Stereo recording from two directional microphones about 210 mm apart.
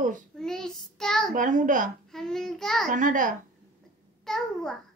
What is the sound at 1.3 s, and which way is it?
Speech, 40° right (ahead or behind).